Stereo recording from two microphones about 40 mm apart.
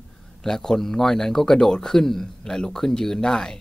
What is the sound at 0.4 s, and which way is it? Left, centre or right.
Speech, centre.